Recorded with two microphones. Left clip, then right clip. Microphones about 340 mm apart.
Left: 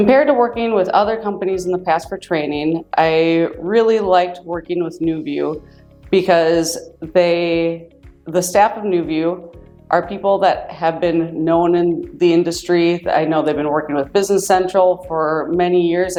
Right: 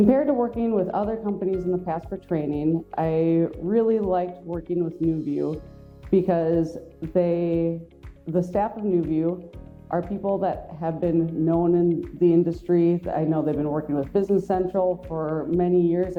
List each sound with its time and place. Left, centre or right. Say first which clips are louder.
0.0 s speech: left 9 dB; centre